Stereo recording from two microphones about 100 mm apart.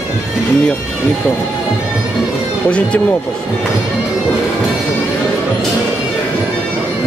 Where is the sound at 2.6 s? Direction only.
15° left (ahead or behind).